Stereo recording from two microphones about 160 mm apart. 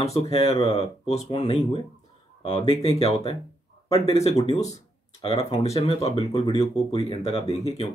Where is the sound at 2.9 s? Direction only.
40° left (ahead or behind).